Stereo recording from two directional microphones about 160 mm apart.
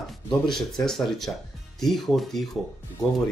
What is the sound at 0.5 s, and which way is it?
Speech, centre (ahead or behind).